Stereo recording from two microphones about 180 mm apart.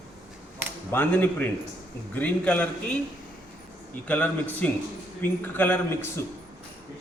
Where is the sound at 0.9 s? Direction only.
10° left (ahead or behind).